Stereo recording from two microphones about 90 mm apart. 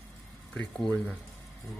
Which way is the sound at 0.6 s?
10° left (ahead or behind).